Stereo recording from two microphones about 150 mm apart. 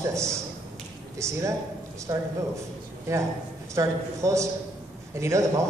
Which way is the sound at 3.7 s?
20° right (ahead or behind).